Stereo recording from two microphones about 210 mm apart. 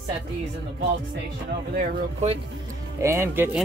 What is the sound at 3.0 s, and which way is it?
Speech, 15° right (ahead or behind).